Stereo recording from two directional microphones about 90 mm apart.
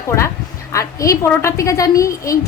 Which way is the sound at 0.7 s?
35° left (ahead or behind).